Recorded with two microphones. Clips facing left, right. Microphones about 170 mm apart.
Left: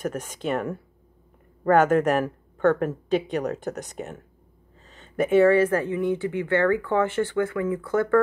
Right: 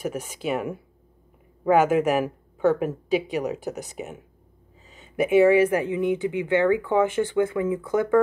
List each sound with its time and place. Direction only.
0.0 s speech: 5° right (ahead or behind)